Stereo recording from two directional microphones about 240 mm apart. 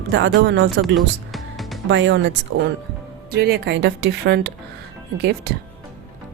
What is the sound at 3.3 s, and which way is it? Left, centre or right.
A woman's voice, right.